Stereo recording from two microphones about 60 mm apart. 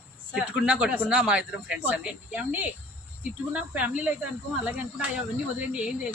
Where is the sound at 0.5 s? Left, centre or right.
Centre.